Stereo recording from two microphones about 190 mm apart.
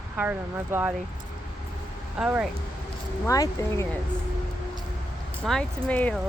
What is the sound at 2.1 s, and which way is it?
Speech, 5° right (ahead or behind).